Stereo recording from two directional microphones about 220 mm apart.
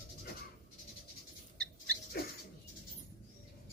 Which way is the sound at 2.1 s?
45° left (ahead or behind).